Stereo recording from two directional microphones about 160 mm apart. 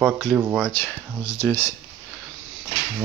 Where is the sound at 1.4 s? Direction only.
15° left (ahead or behind).